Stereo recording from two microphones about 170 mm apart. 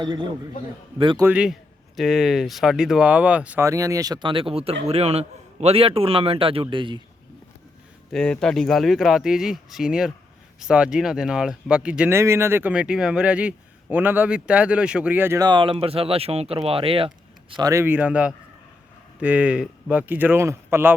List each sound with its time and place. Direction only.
0.0 s speech: 25° right (ahead or behind)
1.2 s speech: 5° right (ahead or behind); by 7.0 s 30° right (ahead or behind)
8.1 s speech: 5° left (ahead or behind); by 17.1 s 35° right (ahead or behind)
17.5 s speech: 20° right (ahead or behind)